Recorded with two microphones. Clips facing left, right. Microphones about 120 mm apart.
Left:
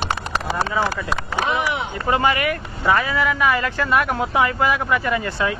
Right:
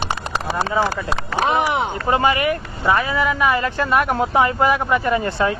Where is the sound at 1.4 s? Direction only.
40° right (ahead or behind).